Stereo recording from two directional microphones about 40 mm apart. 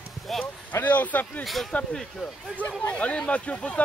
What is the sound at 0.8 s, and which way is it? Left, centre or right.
Speech, left.